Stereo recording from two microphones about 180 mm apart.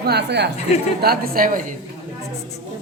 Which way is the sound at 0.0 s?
65° right (ahead or behind).